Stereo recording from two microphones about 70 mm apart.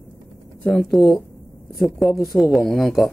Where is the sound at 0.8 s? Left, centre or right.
Centre.